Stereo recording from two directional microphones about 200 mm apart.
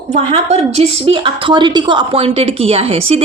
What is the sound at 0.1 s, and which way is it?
A woman's voice, 30° right (ahead or behind).